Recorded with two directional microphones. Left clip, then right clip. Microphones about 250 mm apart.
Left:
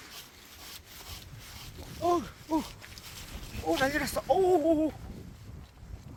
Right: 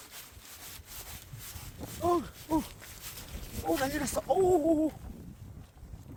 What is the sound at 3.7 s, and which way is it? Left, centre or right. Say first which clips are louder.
Chicken: left 4 dB; centre.